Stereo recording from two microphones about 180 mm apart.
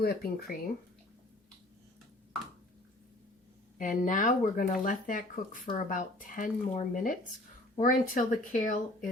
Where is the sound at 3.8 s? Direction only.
45° left (ahead or behind).